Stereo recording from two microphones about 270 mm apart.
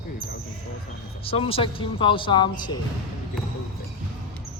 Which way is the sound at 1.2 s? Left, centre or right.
Left.